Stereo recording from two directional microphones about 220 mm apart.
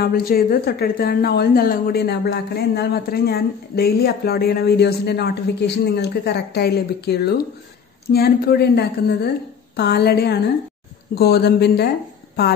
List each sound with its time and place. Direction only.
0.0 s a woman's voice: 40° left (ahead or behind)